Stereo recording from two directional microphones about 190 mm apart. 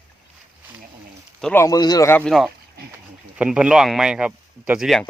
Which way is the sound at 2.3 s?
Centre (ahead or behind).